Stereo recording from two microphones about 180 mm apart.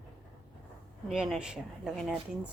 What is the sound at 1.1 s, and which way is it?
Speech, centre (ahead or behind).